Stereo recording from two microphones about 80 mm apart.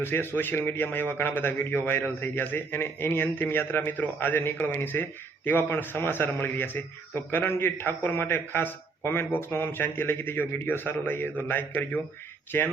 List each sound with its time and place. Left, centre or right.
0.0 s a man's voice: left